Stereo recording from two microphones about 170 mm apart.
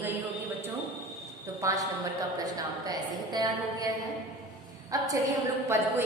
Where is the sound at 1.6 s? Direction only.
20° right (ahead or behind).